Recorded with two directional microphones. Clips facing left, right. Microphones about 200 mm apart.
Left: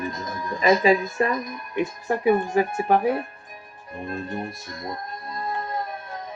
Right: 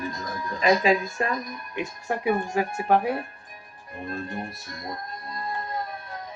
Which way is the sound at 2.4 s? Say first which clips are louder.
Left 4 dB; 20° left (ahead or behind).